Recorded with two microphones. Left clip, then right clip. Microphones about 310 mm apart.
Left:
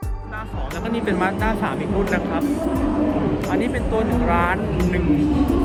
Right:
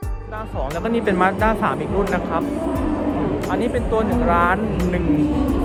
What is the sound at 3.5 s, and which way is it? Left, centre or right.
Speech, centre.